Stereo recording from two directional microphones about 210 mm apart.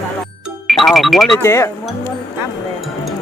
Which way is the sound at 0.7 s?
Centre (ahead or behind).